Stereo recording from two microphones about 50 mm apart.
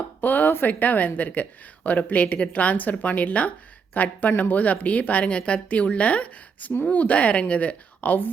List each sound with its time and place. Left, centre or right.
0.2 s a woman's voice: left